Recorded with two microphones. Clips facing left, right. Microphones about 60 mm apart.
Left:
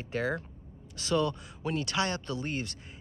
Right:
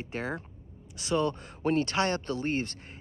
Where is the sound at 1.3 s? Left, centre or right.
Right.